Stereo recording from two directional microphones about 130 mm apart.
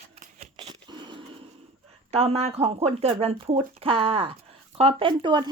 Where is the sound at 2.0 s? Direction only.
50° right (ahead or behind).